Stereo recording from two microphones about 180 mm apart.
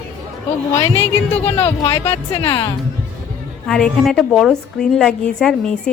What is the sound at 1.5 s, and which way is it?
Speech, 10° left (ahead or behind).